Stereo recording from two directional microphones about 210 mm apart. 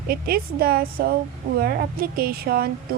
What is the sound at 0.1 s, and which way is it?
Speech, 45° right (ahead or behind).